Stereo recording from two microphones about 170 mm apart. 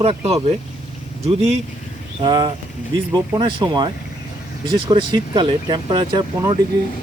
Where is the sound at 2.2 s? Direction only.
25° right (ahead or behind).